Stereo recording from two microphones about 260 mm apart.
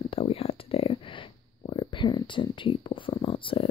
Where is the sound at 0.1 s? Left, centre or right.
Left.